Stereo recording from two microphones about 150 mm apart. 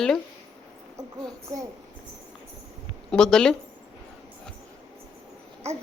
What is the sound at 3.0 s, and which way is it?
Speech, 5° left (ahead or behind).